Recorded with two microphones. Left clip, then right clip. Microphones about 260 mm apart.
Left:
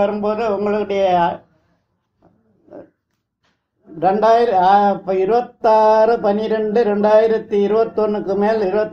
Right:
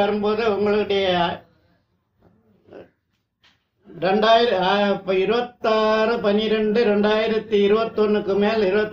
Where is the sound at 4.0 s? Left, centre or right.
Left.